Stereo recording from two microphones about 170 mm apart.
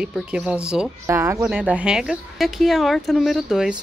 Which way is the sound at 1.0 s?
15° right (ahead or behind).